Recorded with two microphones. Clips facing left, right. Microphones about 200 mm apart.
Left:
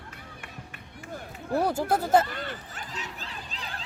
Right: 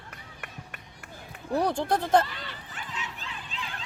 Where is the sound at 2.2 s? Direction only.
50° left (ahead or behind).